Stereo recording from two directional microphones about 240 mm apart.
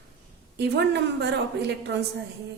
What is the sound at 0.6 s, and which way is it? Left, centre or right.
A woman's voice, right.